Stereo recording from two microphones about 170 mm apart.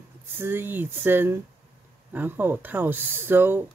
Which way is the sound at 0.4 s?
10° right (ahead or behind).